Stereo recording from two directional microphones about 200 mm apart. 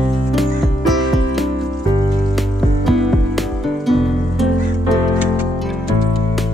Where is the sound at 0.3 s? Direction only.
Centre (ahead or behind).